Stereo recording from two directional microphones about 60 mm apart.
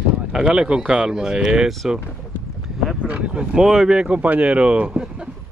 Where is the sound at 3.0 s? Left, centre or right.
Centre.